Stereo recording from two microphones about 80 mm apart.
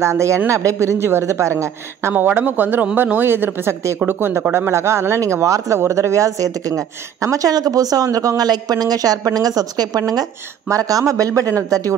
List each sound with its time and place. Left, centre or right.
0.0 s speech: right
2.1 s a man's voice: right